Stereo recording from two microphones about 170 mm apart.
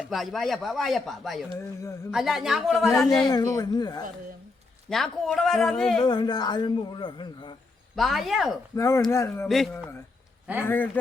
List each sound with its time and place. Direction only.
0.0 s speech: centre (ahead or behind)
1.5 s speech: 15° left (ahead or behind)
2.0 s speech: centre (ahead or behind)
3.2 s speech: 20° left (ahead or behind)
4.9 s speech: centre (ahead or behind)
6.0 s speech: 25° left (ahead or behind)
7.9 s speech: centre (ahead or behind)
8.7 s speech: 15° left (ahead or behind)
10.6 s speech: 10° left (ahead or behind)